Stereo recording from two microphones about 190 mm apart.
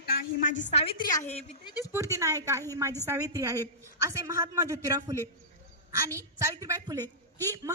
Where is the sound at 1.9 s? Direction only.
15° right (ahead or behind).